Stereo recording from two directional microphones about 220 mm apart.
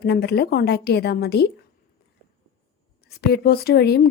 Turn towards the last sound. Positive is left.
turn(degrees=45)  # may be behind; listen again after turning